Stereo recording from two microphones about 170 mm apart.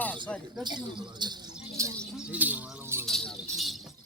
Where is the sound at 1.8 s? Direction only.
20° right (ahead or behind).